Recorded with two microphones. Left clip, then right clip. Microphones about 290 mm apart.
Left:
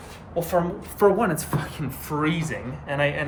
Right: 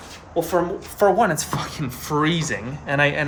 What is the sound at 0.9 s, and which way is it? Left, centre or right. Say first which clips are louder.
Speech: right 3 dB; centre.